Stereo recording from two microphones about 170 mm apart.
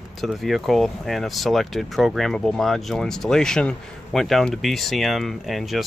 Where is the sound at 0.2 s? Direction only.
Centre (ahead or behind).